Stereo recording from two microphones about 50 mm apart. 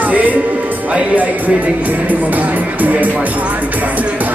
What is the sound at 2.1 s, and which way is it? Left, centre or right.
Speech, right.